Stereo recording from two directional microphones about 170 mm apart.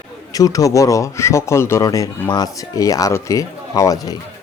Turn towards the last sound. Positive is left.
turn(degrees=20)  # may be behind; listen again after turning